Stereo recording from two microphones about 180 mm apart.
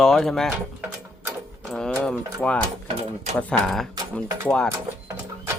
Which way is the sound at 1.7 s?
5° left (ahead or behind).